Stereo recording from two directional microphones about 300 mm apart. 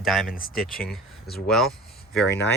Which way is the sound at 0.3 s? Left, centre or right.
Left.